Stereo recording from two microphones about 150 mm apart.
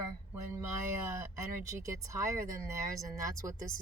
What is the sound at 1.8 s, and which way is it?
Speech, 20° right (ahead or behind).